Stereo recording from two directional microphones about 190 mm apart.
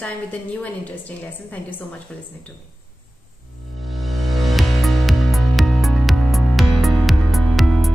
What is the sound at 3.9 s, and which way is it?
Music, centre (ahead or behind).